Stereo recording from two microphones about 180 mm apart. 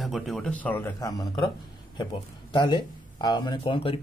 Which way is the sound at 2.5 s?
25° left (ahead or behind).